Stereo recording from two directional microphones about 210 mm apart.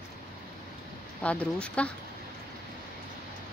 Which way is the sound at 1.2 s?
5° left (ahead or behind).